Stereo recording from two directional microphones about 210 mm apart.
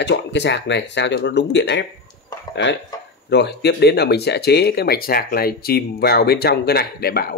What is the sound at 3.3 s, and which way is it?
Speech, 50° left (ahead or behind).